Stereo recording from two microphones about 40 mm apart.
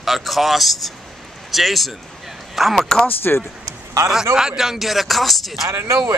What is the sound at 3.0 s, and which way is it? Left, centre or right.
Speech, left.